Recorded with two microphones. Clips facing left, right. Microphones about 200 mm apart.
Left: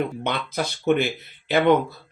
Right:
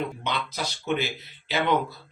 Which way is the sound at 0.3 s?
55° left (ahead or behind).